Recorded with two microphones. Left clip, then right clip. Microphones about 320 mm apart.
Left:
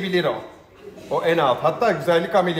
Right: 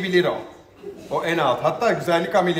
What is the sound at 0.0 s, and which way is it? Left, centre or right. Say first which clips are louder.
A man's voice: right 2 dB; centre.